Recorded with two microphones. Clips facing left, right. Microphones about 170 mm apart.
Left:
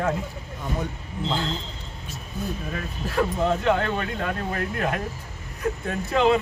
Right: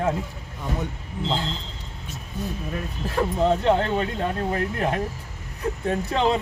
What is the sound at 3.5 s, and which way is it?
Speech, 25° right (ahead or behind).